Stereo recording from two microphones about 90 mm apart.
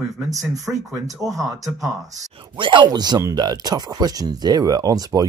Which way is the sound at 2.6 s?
60° right (ahead or behind).